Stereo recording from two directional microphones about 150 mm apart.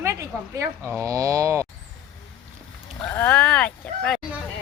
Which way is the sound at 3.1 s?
15° left (ahead or behind).